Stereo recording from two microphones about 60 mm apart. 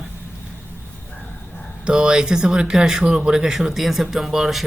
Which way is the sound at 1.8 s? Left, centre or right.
Centre.